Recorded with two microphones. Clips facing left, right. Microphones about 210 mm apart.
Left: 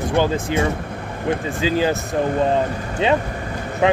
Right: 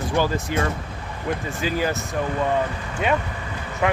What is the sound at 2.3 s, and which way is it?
Speech, 35° left (ahead or behind).